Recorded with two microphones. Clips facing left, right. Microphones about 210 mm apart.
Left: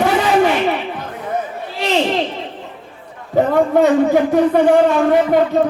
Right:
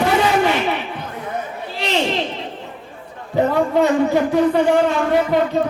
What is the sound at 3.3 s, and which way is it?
A man's voice, 50° left (ahead or behind).